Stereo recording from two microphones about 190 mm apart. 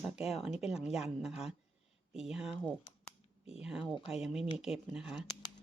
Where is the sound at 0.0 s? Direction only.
Centre (ahead or behind).